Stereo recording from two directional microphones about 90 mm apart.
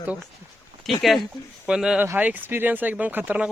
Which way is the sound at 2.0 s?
20° right (ahead or behind).